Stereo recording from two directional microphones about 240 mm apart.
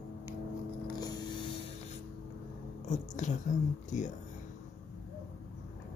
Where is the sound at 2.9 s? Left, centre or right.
Left.